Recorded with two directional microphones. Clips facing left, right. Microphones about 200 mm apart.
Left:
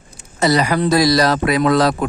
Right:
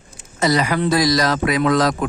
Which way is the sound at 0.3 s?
35° left (ahead or behind).